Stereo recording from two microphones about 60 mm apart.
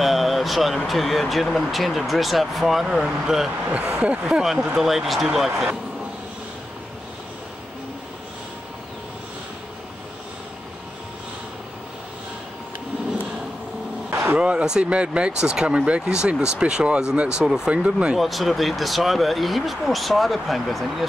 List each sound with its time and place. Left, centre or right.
0.0 s a sound: centre
0.8 s speech: centre
3.6 s speech: right
4.7 s speech: centre
14.1 s a sound: right
14.4 s speech: centre
18.1 s speech: centre